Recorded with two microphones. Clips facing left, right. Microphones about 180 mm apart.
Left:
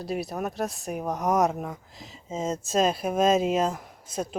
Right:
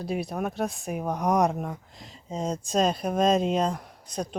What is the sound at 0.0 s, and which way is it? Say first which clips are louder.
Speech: right 1 dB; centre (ahead or behind).